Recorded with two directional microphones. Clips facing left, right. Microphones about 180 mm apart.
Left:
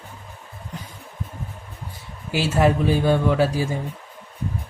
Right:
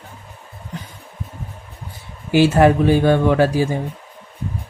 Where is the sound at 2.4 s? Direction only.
65° right (ahead or behind).